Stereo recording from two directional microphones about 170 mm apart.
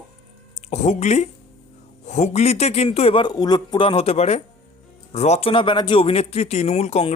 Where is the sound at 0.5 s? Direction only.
40° left (ahead or behind).